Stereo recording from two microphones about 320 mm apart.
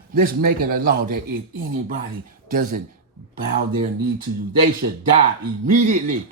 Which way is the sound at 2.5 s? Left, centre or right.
Right.